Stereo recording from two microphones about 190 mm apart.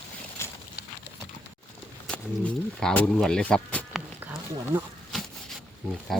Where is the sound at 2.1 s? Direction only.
5° left (ahead or behind).